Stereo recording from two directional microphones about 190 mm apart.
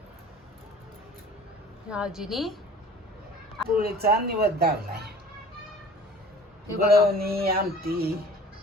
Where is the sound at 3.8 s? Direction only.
55° right (ahead or behind).